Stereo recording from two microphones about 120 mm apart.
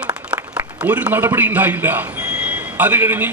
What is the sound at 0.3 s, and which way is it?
A man's voice, 10° right (ahead or behind).